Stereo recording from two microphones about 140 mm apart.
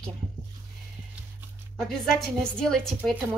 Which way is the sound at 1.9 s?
5° left (ahead or behind).